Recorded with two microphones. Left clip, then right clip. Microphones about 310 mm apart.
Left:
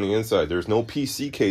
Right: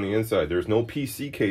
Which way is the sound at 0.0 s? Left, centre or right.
Left.